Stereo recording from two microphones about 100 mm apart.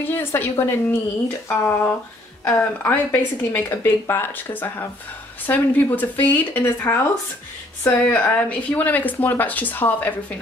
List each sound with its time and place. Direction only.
0.0 s speech: 20° left (ahead or behind)